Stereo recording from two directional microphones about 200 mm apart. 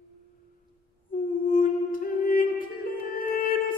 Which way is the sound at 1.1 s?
45° left (ahead or behind).